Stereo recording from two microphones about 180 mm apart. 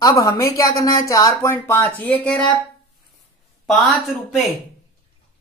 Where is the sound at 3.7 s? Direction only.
Centre (ahead or behind).